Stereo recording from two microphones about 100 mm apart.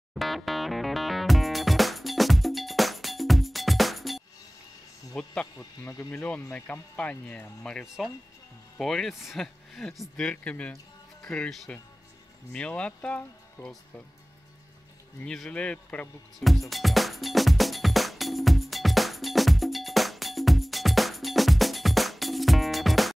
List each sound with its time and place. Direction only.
0.1 s music: centre (ahead or behind)
5.1 s speech: 10° left (ahead or behind)
5.6 s speech: 30° left (ahead or behind)
6.1 s speech: 10° left (ahead or behind)
7.8 s speech: 5° right (ahead or behind)
15.2 s speech: 5° left (ahead or behind)
16.3 s music: centre (ahead or behind)